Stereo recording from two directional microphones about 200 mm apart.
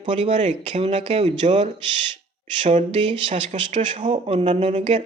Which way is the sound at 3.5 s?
40° right (ahead or behind).